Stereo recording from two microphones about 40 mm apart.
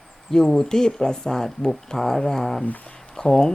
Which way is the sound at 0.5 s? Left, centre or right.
Centre.